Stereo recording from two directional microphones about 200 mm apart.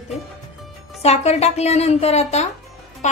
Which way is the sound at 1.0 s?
30° left (ahead or behind).